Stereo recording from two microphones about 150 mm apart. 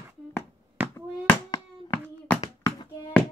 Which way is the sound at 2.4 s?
40° left (ahead or behind).